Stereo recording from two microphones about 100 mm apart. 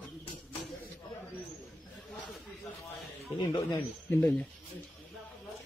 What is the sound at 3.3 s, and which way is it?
Speech, 50° left (ahead or behind).